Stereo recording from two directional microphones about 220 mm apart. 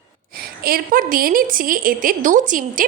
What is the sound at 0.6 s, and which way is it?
A woman's voice, 40° right (ahead or behind).